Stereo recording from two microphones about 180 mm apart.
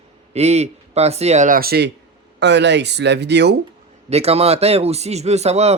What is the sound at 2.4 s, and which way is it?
Speech, 70° right (ahead or behind).